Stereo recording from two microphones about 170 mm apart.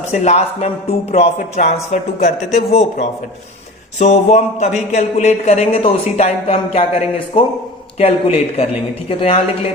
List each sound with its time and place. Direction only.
0.1 s a man's voice: 40° left (ahead or behind)